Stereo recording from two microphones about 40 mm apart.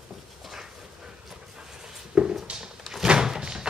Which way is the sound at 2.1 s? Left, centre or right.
Right.